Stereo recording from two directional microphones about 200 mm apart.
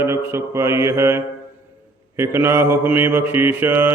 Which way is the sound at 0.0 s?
10° right (ahead or behind).